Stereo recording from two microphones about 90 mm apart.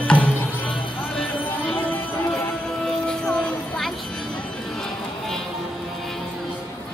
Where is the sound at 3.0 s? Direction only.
5° left (ahead or behind).